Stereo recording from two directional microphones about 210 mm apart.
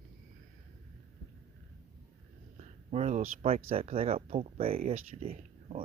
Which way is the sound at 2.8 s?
30° right (ahead or behind).